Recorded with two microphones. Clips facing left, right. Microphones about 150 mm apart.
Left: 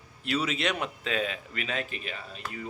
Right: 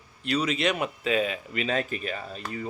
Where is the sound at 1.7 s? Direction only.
40° right (ahead or behind).